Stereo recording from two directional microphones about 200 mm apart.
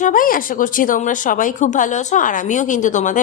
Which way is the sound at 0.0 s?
45° left (ahead or behind).